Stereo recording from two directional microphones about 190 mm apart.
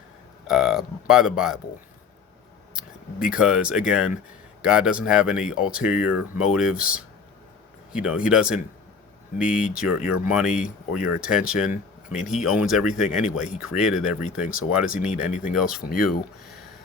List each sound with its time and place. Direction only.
0.4 s speech: centre (ahead or behind)
2.7 s speech: 5° right (ahead or behind)
15.3 s speech: 40° left (ahead or behind)
15.5 s speech: centre (ahead or behind)